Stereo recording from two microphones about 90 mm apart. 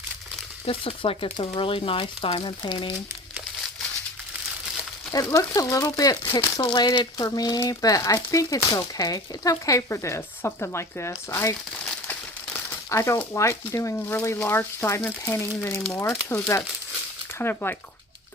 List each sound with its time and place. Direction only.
0.7 s speech: 85° left; by 2.9 s 60° left (ahead or behind)
5.1 s speech: 40° left (ahead or behind)
12.9 s speech: 35° left (ahead or behind)